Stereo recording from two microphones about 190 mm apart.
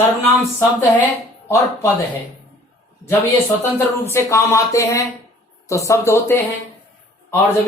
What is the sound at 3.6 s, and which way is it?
Speech, 15° left (ahead or behind).